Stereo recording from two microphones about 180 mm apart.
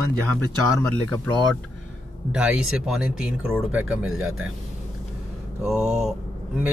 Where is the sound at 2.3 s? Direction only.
5° right (ahead or behind).